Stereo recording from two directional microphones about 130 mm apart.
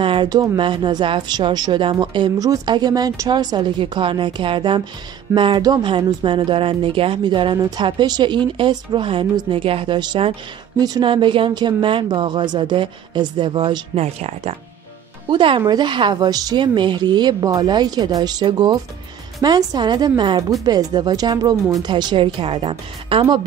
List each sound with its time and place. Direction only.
0.0 s speech: 40° right (ahead or behind)
13.9 s speech: 55° right (ahead or behind)
15.2 s speech: 40° right (ahead or behind)